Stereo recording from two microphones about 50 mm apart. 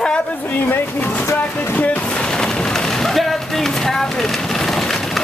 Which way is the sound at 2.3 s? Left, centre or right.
Centre.